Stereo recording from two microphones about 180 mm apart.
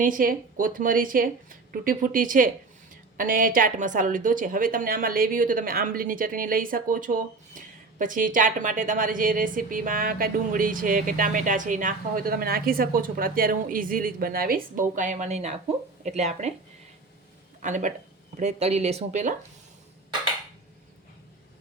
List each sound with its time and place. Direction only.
0.0 s a woman's voice: 50° right (ahead or behind)
17.6 s a woman's voice: 45° right (ahead or behind)